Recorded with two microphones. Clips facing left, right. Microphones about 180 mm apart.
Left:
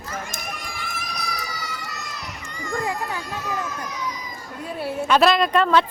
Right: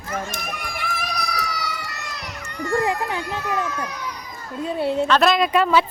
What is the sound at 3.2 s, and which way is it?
A child's voice, 65° right (ahead or behind).